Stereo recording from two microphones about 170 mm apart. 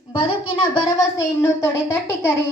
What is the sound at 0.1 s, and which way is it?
Speech, 30° left (ahead or behind).